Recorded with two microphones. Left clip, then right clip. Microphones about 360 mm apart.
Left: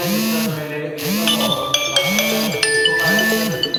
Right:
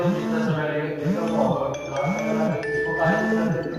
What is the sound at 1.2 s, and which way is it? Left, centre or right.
Music, left.